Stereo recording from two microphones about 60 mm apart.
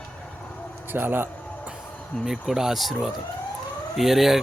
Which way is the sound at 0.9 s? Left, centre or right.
Right.